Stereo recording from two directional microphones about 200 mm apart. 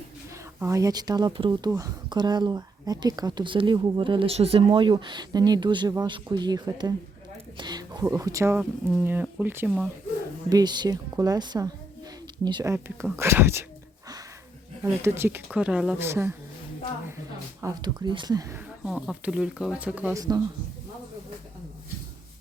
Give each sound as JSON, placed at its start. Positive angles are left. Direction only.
{"t": 0.6, "sound": "speech", "side_deg": -15}
{"t": 10.5, "sound": "speech", "side_deg": -20}
{"t": 12.7, "sound": "speech", "side_deg": -10}
{"t": 15.0, "sound": "speech", "side_deg": -10}
{"t": 17.6, "sound": "speech", "side_deg": -20}
{"t": 18.9, "sound": "speech", "side_deg": -5}